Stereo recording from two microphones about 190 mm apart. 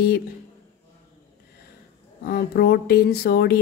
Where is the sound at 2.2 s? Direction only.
50° left (ahead or behind).